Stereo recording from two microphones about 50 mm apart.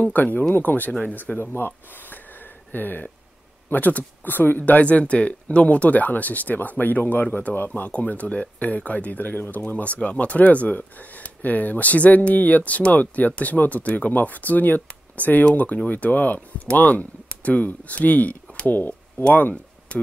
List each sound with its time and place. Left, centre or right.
0.0 s speech: left
1.5 s speech: left
7.9 s speech: left
19.2 s speech: left